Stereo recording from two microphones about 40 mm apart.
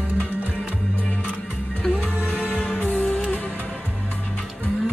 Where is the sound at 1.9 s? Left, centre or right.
Right.